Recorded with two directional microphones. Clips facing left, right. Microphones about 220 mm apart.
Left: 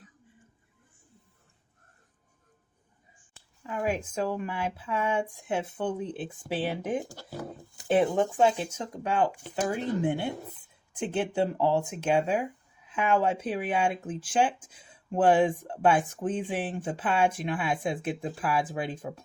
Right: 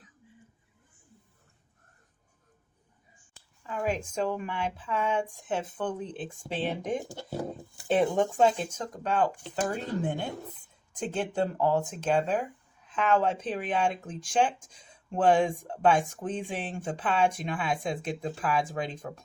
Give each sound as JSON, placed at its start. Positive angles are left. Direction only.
{"t": 3.3, "sound": "speech", "side_deg": 10}
{"t": 7.1, "sound": "speech", "side_deg": -25}
{"t": 7.9, "sound": "speech", "side_deg": 5}